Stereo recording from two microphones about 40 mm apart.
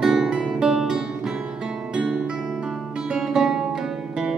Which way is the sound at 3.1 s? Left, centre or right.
Centre.